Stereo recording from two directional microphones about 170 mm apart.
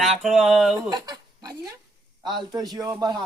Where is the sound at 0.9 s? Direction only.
25° right (ahead or behind).